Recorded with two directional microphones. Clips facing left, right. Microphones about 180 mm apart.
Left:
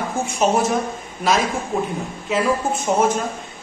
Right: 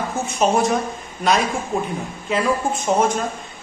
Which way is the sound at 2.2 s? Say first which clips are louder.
Even; 5° left (ahead or behind).